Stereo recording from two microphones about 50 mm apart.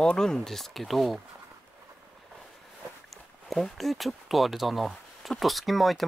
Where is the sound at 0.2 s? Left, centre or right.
Centre.